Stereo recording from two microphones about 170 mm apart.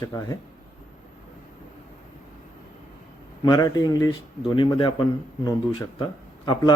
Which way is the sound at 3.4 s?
25° left (ahead or behind).